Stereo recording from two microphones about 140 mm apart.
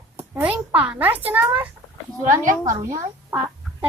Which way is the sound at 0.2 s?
10° right (ahead or behind).